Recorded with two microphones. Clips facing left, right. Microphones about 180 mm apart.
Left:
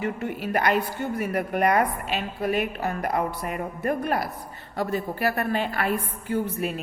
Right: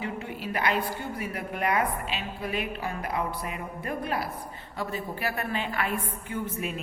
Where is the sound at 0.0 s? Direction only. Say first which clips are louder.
Left 5 dB; 50° left (ahead or behind).